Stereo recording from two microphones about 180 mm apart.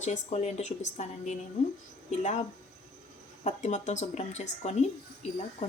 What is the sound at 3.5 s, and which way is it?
Speech, 40° left (ahead or behind).